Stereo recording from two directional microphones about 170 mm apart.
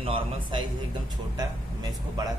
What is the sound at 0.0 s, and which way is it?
Speech, 30° right (ahead or behind).